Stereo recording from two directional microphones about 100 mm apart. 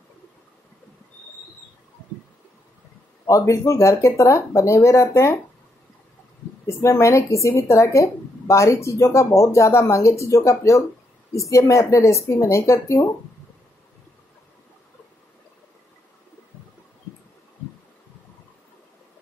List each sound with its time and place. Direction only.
3.3 s speech: 30° left (ahead or behind)
6.6 s a woman's voice: 30° left (ahead or behind)